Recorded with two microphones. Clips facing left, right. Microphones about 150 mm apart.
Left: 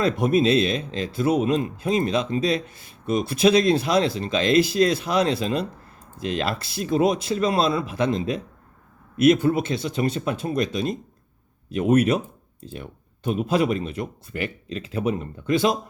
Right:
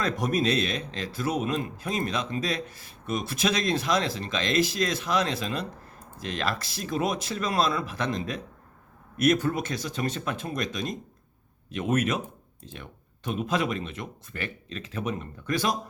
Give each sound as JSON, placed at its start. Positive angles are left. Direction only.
{"t": 0.0, "sound": "speech", "side_deg": 25}